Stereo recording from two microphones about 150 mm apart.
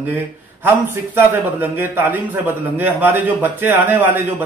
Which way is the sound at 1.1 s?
15° right (ahead or behind).